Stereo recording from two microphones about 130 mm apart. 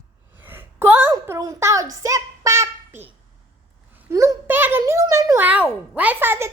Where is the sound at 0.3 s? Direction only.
15° right (ahead or behind).